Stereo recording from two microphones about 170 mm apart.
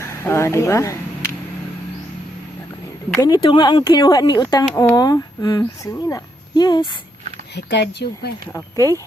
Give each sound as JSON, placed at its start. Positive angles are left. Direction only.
{"t": 0.0, "sound": "a sound", "side_deg": 15}
{"t": 3.2, "sound": "speech", "side_deg": 25}
{"t": 7.5, "sound": "speech", "side_deg": 90}
{"t": 8.5, "sound": "speech", "side_deg": 20}